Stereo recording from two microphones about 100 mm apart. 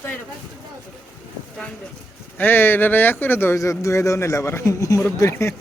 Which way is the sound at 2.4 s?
20° left (ahead or behind).